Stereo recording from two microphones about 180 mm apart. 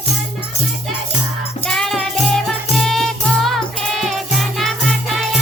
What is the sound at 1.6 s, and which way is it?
Music, 5° left (ahead or behind).